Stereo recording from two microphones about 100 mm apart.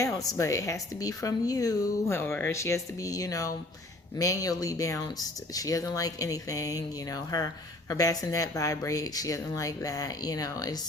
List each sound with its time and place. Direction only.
0.2 s speech: 35° left (ahead or behind)
2.1 s speech: 25° left (ahead or behind)